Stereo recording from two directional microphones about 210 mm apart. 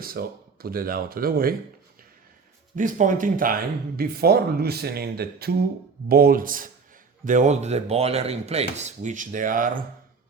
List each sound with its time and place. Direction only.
0.0 s speech: 45° right (ahead or behind)
2.7 s speech: 35° right (ahead or behind)